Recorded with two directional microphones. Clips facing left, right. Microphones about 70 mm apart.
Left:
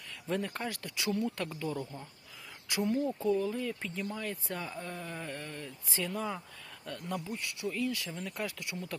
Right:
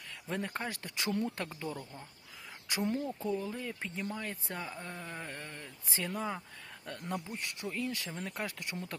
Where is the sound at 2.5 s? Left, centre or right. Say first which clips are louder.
Left 2 dB; right.